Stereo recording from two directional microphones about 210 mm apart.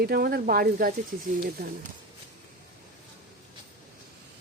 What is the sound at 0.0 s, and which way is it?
Speech, 45° right (ahead or behind).